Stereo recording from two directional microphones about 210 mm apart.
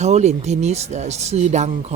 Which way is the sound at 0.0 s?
30° right (ahead or behind).